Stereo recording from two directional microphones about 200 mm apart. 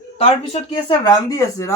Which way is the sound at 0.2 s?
25° left (ahead or behind).